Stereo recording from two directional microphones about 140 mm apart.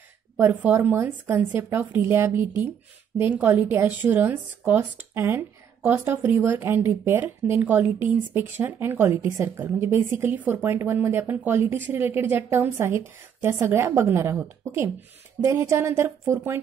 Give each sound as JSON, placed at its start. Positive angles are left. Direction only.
{"t": 0.4, "sound": "speech", "side_deg": -10}